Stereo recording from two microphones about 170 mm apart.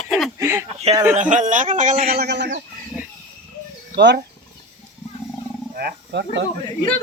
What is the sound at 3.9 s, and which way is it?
Speech, 80° right.